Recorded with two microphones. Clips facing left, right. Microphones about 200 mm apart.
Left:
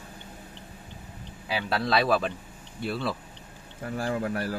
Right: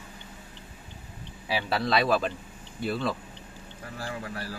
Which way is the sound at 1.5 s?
Centre (ahead or behind).